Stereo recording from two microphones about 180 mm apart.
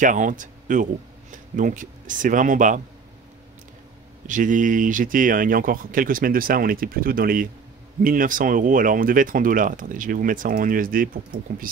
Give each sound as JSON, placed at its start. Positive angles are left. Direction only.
{"t": 0.0, "sound": "speech", "side_deg": -45}
{"t": 4.3, "sound": "speech", "side_deg": -45}